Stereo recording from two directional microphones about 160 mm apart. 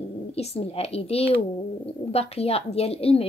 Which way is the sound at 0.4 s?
40° left (ahead or behind).